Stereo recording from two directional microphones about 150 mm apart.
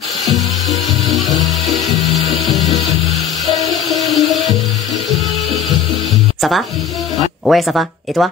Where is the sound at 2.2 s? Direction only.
Centre (ahead or behind).